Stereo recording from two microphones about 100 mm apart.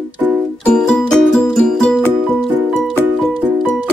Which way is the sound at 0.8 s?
10° left (ahead or behind).